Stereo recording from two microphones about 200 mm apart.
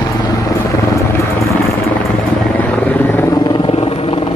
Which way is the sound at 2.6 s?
10° left (ahead or behind).